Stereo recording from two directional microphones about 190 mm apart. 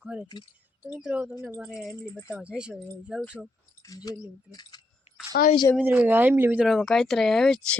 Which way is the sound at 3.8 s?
20° left (ahead or behind).